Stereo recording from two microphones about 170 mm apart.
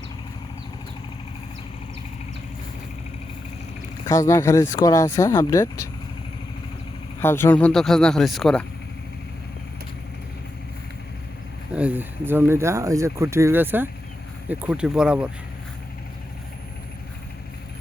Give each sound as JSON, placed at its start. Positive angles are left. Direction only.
{"t": 4.0, "sound": "speech", "side_deg": 20}
{"t": 7.2, "sound": "speech", "side_deg": 15}
{"t": 11.7, "sound": "speech", "side_deg": -10}